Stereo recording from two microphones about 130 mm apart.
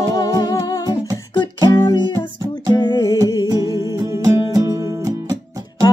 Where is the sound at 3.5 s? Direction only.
25° right (ahead or behind).